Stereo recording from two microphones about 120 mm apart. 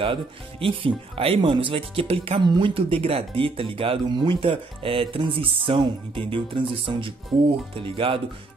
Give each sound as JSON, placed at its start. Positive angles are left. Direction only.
{"t": 0.0, "sound": "speech", "side_deg": -50}